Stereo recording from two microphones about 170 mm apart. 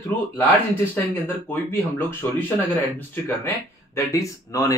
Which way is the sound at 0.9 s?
10° left (ahead or behind).